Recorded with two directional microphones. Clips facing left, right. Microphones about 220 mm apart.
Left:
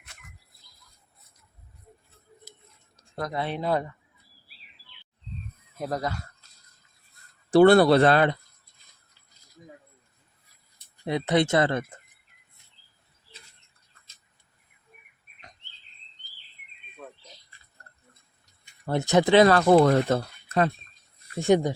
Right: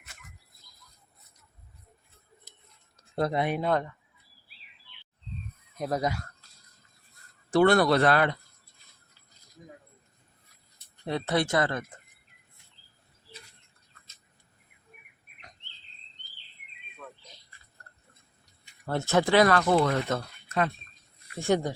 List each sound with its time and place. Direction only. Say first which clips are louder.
3.2 s speech: right 4 dB; 30° right (ahead or behind)
3.6 s speech: left 4 dB; 5° left (ahead or behind)
5.7 s speech: even; centre (ahead or behind)
7.5 s speech: left 5 dB; 30° left (ahead or behind)
11.0 s speech: left 4 dB; 15° left (ahead or behind)
18.9 s speech: left 4 dB; 15° left (ahead or behind)
19.6 s speech: left 6 dB; 40° left (ahead or behind)
21.3 s speech: left 5 dB; 15° left (ahead or behind)